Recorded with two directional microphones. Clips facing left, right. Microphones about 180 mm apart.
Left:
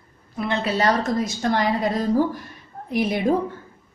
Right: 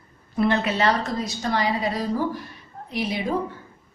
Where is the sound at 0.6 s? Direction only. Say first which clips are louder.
Left 2 dB; 40° left (ahead or behind).